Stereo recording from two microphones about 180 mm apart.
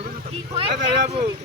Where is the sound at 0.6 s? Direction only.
30° right (ahead or behind).